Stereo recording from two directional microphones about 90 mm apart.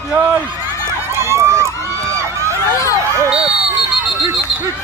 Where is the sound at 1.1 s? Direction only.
30° right (ahead or behind).